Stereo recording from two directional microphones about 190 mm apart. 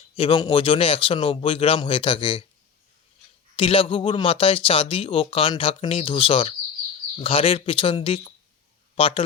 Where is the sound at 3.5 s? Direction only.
25° left (ahead or behind).